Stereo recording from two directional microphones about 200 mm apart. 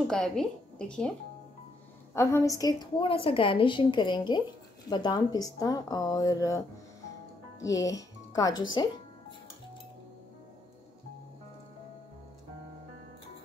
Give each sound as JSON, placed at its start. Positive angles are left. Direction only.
{"t": 0.1, "sound": "a woman's voice", "side_deg": 5}
{"t": 2.1, "sound": "a woman's voice", "side_deg": 15}
{"t": 7.6, "sound": "speech", "side_deg": 15}